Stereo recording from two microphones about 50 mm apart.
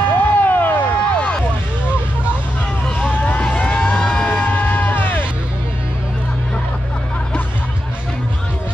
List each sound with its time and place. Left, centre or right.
0.1 s a sound: left
3.0 s vehicle: left
4.3 s music: left